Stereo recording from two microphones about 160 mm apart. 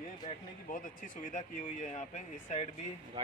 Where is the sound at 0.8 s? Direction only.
55° left (ahead or behind).